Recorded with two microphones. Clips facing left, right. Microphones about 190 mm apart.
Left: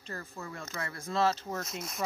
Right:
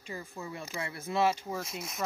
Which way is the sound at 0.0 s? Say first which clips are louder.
Right 1 dB; 10° right (ahead or behind).